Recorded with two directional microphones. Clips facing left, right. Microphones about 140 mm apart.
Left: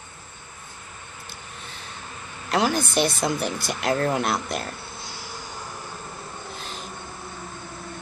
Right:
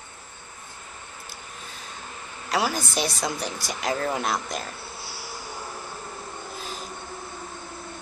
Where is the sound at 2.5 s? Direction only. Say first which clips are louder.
Left 3 dB; 5° right (ahead or behind).